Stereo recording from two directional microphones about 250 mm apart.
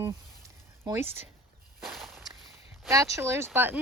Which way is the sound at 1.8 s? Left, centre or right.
Centre.